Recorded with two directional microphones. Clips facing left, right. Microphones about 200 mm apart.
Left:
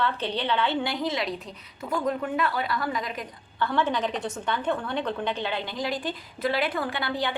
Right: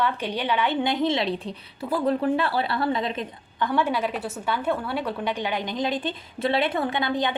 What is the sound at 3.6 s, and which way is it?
A woman's voice, 10° right (ahead or behind).